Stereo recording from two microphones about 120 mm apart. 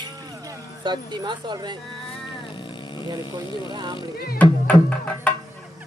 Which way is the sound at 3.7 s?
35° right (ahead or behind).